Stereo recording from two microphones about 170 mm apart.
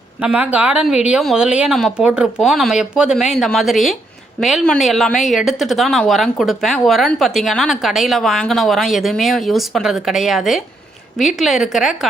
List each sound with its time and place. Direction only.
0.2 s a woman's voice: 10° right (ahead or behind)